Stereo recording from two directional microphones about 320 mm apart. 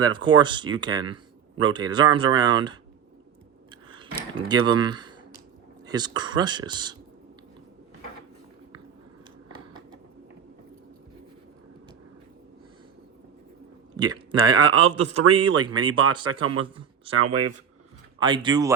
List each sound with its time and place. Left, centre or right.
0.0 s speech: centre
3.8 s speech: centre
13.9 s a man's voice: centre
17.2 s speech: right
18.2 s speech: centre